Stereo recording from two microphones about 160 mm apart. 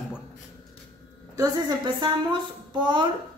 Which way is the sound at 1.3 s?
25° right (ahead or behind).